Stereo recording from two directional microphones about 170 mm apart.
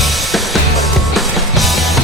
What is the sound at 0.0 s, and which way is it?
Music, centre (ahead or behind).